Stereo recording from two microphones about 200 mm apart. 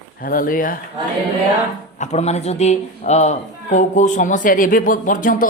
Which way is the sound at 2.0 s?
35° left (ahead or behind).